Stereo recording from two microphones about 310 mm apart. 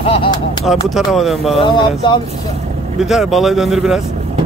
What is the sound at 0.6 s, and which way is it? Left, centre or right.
Speech, centre.